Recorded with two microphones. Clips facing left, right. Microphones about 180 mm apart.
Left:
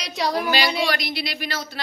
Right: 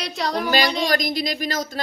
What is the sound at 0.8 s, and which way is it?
A woman's voice, 40° right (ahead or behind).